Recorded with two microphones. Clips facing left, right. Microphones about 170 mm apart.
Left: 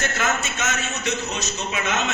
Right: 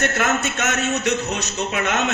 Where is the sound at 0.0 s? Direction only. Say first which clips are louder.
Right 4 dB; 65° right (ahead or behind).